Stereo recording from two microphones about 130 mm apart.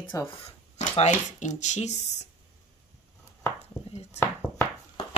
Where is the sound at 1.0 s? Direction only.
65° left (ahead or behind).